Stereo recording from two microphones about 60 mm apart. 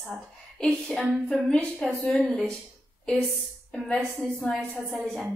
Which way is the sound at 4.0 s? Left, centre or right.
Centre.